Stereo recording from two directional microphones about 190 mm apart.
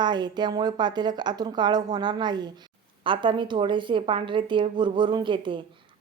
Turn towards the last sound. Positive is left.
turn(degrees=-25)  # may be behind; listen again after turning